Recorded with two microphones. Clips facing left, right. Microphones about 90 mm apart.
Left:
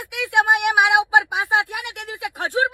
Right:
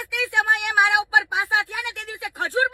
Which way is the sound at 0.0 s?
20° left (ahead or behind).